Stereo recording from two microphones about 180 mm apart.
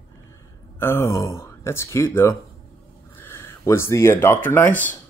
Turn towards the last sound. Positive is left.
turn(degrees=10)  # may be behind; listen again after turning